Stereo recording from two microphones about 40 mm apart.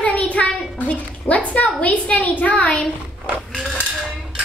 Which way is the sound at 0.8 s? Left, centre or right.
Left.